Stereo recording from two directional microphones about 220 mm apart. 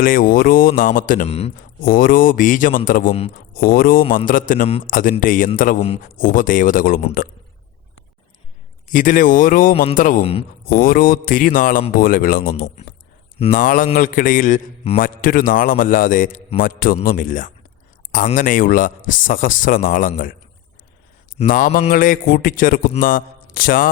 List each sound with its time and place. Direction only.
0.0 s a man's voice: 40° left (ahead or behind)
1.8 s a man's voice: 40° left (ahead or behind)
8.9 s a man's voice: 35° left (ahead or behind)
21.3 s a man's voice: 40° left (ahead or behind)
23.0 s mantra: 40° left (ahead or behind)